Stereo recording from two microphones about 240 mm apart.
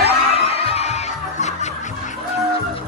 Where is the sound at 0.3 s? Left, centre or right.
Left.